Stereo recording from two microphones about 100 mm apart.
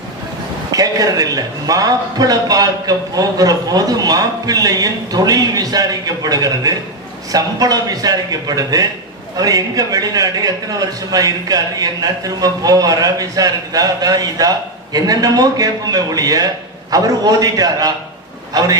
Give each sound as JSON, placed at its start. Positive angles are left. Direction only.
{"t": 0.7, "sound": "a man's voice", "side_deg": -40}